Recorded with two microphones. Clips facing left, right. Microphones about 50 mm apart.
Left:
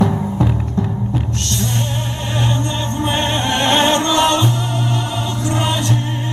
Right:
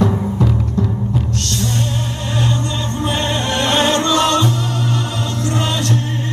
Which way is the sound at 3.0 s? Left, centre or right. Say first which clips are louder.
Left 1 dB; left.